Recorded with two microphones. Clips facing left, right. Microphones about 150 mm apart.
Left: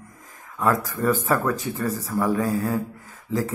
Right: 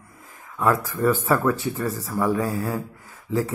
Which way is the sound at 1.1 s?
45° left (ahead or behind).